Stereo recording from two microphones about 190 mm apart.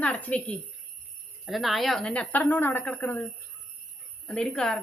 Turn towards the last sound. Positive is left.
turn(degrees=5)  # may be behind; listen again after turning